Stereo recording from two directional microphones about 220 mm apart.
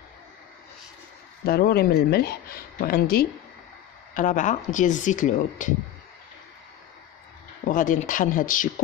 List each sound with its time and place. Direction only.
1.4 s speech: 45° left (ahead or behind)
7.6 s speech: 35° left (ahead or behind)